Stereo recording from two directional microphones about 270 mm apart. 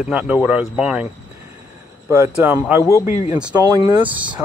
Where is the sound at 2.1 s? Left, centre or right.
Centre.